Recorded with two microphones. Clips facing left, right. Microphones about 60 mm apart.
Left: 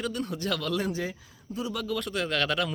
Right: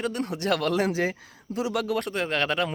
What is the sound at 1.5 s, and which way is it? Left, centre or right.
Speech, right.